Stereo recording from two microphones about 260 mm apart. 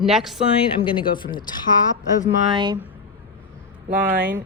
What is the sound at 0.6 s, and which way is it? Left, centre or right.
Speech, centre.